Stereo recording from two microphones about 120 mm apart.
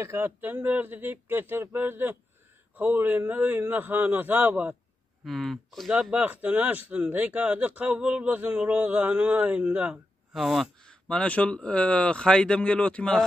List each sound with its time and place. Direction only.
0.0 s speech: 20° right (ahead or behind)
5.2 s speech: centre (ahead or behind)
6.1 s speech: 10° right (ahead or behind); by 13.2 s 10° left (ahead or behind)